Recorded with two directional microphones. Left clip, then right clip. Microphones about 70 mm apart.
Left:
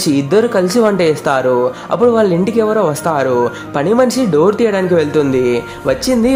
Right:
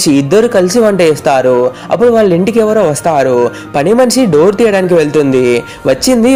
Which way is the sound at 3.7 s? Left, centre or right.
Right.